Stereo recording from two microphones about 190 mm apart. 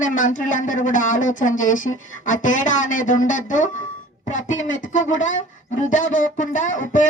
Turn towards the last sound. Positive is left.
turn(degrees=45)  # may be behind; listen again after turning